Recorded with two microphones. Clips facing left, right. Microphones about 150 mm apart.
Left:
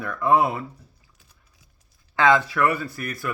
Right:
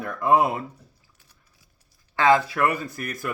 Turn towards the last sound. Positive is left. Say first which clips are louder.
# left 1 dB
turn(degrees=-45)  # may be behind; listen again after turning